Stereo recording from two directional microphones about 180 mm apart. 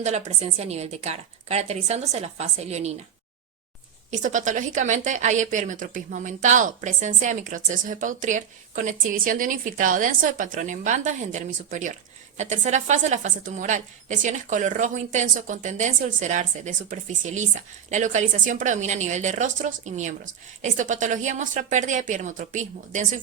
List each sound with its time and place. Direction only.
0.0 s a woman's voice: 40° right (ahead or behind)
4.1 s a woman's voice: 45° right (ahead or behind)